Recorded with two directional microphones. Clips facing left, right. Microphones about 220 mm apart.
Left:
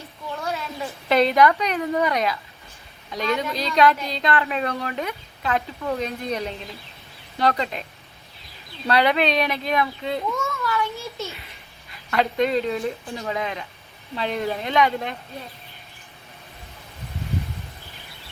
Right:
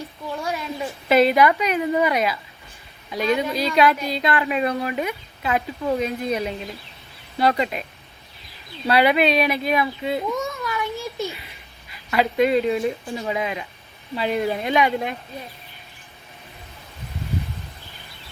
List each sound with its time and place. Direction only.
0.4 s a woman's voice: 15° right (ahead or behind)
8.9 s a woman's voice: 10° right (ahead or behind)
10.3 s a sound: 15° right (ahead or behind)
12.1 s a woman's voice: 5° right (ahead or behind)